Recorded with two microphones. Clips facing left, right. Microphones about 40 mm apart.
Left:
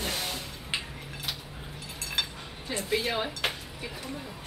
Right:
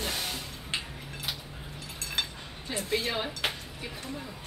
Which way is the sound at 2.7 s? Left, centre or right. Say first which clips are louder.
Left 1 dB; centre.